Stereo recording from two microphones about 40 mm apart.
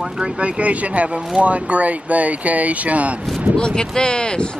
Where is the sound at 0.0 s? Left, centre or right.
Right.